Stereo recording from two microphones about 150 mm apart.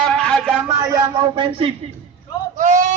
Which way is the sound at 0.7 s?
20° right (ahead or behind).